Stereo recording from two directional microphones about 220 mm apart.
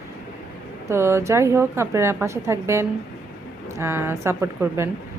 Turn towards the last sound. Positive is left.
turn(degrees=-10)  # may be behind; listen again after turning